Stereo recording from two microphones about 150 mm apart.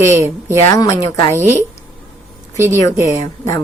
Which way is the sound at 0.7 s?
20° left (ahead or behind).